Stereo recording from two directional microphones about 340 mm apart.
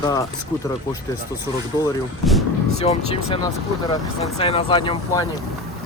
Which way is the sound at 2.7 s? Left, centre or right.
Centre.